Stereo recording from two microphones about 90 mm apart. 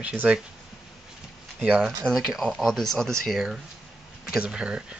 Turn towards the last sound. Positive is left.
turn(degrees=-10)  # may be behind; listen again after turning